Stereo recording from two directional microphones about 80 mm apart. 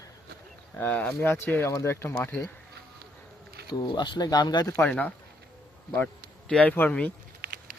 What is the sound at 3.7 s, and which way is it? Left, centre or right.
Speech, left.